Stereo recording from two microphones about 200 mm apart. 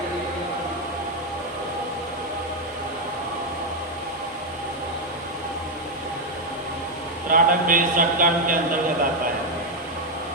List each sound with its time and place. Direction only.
7.3 s a man's voice: 45° right (ahead or behind)